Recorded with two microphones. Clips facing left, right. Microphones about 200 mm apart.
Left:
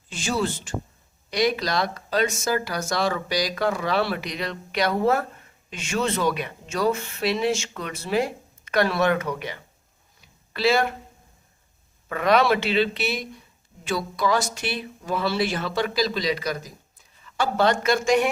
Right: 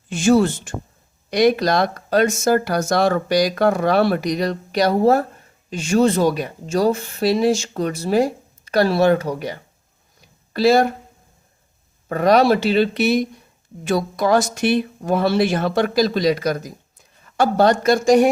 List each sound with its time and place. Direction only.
0.1 s speech: 50° right (ahead or behind)
10.2 s a sound: 40° right (ahead or behind)
12.0 s speech: 40° right (ahead or behind)